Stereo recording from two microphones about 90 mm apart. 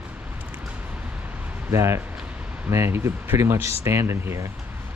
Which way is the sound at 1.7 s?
30° right (ahead or behind).